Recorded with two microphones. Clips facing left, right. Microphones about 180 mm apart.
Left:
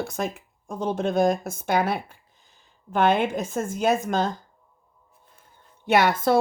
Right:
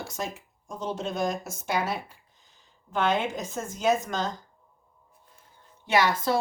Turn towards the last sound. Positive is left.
turn(degrees=55)  # may be behind; listen again after turning